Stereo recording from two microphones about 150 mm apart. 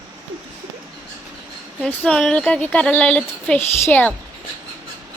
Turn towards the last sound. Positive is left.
turn(degrees=10)  # may be behind; listen again after turning